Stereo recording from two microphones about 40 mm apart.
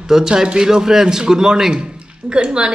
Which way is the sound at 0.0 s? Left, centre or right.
Centre.